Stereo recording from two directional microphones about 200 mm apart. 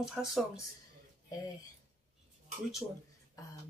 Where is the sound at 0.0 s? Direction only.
Centre (ahead or behind).